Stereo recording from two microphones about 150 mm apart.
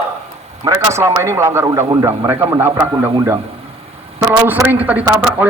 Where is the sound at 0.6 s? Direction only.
20° right (ahead or behind).